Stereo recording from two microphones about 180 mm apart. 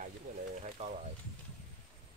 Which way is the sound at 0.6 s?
40° right (ahead or behind).